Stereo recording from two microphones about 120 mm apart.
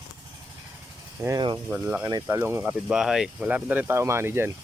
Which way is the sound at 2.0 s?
25° right (ahead or behind).